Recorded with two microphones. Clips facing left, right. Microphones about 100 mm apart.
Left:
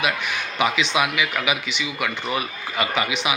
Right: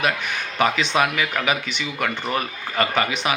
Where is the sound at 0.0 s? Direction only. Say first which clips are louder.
Right 1 dB; 45° right (ahead or behind).